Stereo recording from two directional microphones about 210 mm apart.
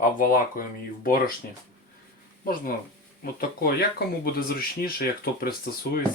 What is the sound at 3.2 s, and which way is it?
Speech, 45° left (ahead or behind).